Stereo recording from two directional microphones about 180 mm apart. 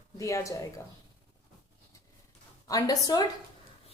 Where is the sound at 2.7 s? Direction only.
20° left (ahead or behind).